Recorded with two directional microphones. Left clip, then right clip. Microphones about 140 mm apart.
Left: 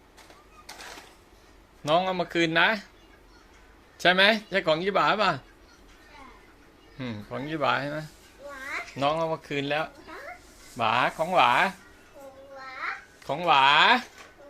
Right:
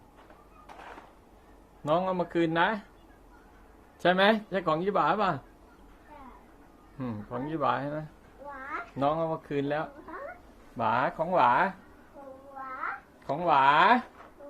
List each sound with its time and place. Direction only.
1.8 s speech: 20° left (ahead or behind)
4.0 s speech: 15° left (ahead or behind)
7.0 s speech: 15° left (ahead or behind)
9.0 s speech: 5° left (ahead or behind)
13.2 s speech: 10° left (ahead or behind)